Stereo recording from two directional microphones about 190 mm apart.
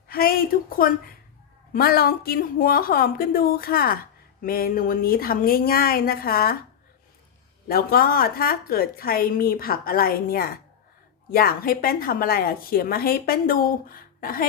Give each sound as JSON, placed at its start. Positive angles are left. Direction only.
{"t": 0.1, "sound": "a woman's voice", "side_deg": 50}
{"t": 7.7, "sound": "a woman's voice", "side_deg": 50}